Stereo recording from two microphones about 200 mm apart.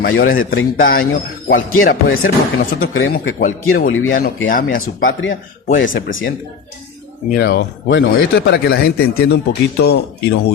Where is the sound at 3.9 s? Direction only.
90° left.